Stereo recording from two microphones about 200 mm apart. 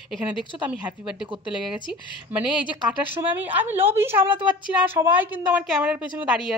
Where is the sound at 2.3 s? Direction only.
5° right (ahead or behind).